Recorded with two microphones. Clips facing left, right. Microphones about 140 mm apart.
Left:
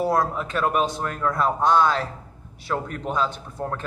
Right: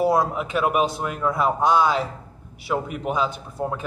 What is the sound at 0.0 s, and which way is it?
A man's voice, 10° right (ahead or behind).